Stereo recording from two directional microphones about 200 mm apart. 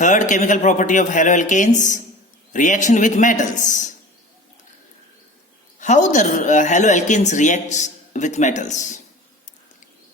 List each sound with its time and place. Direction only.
0.0 s a woman's voice: 40° left (ahead or behind)
5.8 s a woman's voice: 35° left (ahead or behind)